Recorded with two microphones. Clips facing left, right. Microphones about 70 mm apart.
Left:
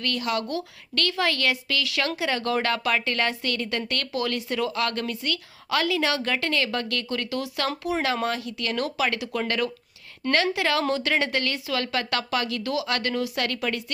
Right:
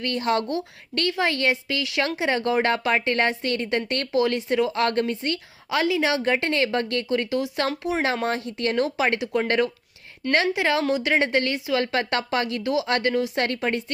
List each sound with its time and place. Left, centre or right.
0.0 s a woman's voice: right